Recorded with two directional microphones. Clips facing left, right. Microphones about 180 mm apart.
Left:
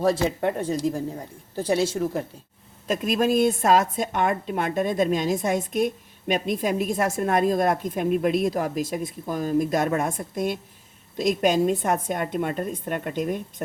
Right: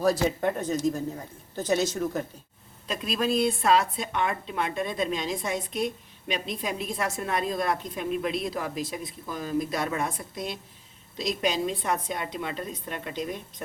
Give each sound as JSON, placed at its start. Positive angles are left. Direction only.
{"t": 0.0, "sound": "speech", "side_deg": 25}
{"t": 2.8, "sound": "a woman's voice", "side_deg": 45}